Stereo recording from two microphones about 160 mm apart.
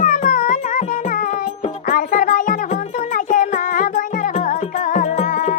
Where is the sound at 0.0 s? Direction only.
50° left (ahead or behind).